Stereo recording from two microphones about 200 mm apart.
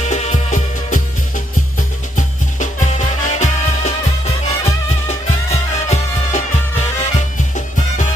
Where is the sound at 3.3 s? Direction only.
35° left (ahead or behind).